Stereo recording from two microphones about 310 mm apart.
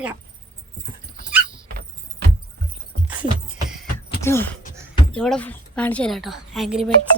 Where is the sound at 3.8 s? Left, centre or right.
Centre.